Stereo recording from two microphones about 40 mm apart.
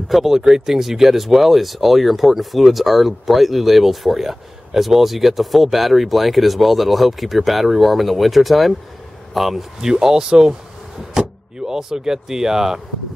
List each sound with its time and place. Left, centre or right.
0.1 s speech: centre
9.8 s speech: centre